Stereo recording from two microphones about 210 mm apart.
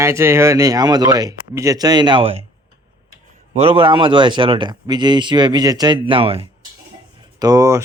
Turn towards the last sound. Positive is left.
turn(degrees=-15)  # may be behind; listen again after turning